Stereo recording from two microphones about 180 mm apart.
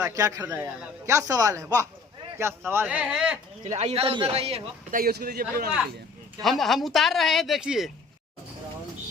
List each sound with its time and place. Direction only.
0.0 s speech: 20° right (ahead or behind)
3.6 s a man's voice: 40° right (ahead or behind)
4.9 s a man's voice: 55° right (ahead or behind)
6.4 s speech: centre (ahead or behind)